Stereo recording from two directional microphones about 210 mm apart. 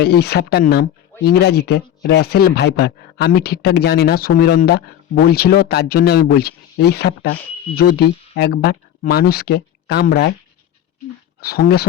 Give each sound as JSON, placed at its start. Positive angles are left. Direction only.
{"t": 0.0, "sound": "speech", "side_deg": 50}
{"t": 11.3, "sound": "speech", "side_deg": 45}